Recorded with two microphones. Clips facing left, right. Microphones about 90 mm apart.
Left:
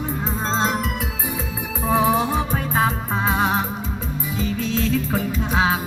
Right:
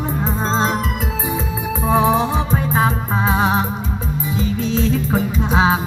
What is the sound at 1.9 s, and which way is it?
Music, 25° right (ahead or behind).